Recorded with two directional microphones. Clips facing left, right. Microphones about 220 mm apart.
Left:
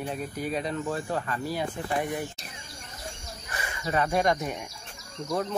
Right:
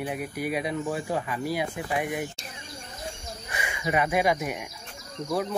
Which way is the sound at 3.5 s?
15° right (ahead or behind).